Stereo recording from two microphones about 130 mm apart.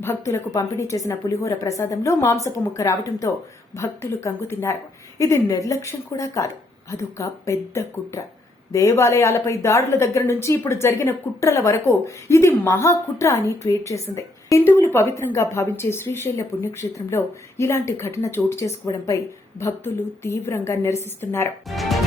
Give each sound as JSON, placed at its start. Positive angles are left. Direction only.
{"t": 0.0, "sound": "a woman's voice", "side_deg": 20}
{"t": 21.7, "sound": "speech", "side_deg": 0}